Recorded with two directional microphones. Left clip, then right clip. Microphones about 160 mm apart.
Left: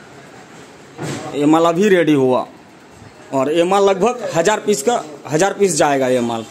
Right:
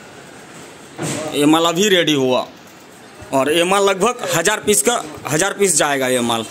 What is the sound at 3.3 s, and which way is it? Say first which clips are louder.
A man's voice: even; 10° left (ahead or behind).